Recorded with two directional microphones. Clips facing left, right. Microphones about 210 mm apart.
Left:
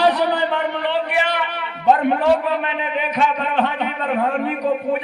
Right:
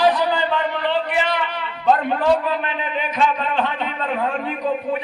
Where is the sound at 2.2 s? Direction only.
65° left (ahead or behind).